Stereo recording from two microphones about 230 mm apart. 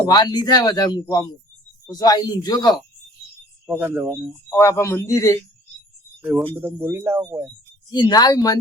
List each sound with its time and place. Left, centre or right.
0.1 s speech: centre
3.7 s speech: centre
4.4 s speech: centre
6.6 s speech: centre
7.9 s speech: centre